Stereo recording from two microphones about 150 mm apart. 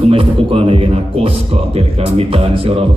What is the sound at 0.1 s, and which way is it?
A man's voice, 40° right (ahead or behind).